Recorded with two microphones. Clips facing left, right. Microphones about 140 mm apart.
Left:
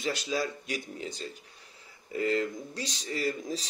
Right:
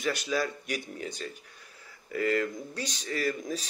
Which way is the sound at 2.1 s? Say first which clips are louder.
Right 1 dB; 20° left (ahead or behind).